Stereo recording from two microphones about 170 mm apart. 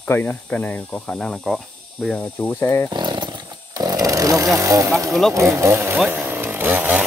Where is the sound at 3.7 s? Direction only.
20° right (ahead or behind).